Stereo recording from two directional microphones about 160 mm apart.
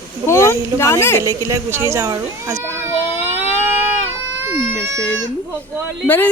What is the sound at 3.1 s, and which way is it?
Baby cry, 15° right (ahead or behind).